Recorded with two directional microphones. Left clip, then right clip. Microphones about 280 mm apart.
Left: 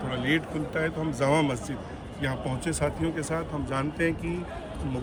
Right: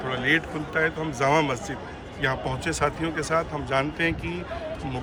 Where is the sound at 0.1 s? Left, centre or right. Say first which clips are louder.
Right 4 dB; centre.